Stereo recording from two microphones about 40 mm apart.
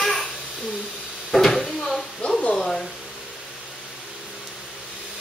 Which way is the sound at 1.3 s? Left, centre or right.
Centre.